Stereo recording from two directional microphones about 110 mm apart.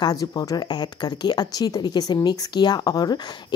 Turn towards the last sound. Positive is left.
turn(degrees=35)  # may be behind; listen again after turning